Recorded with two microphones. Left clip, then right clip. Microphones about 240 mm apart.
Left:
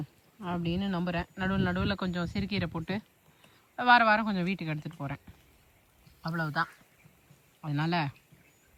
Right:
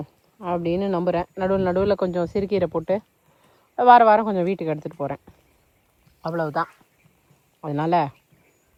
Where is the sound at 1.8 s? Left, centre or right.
Left.